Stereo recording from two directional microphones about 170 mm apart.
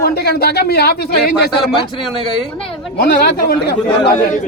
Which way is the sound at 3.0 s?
70° left (ahead or behind).